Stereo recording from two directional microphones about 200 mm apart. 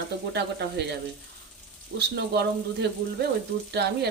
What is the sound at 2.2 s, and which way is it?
Speech, 55° right (ahead or behind).